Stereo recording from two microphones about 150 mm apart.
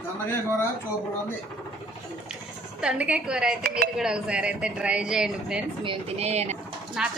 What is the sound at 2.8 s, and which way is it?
A woman's voice, 5° right (ahead or behind).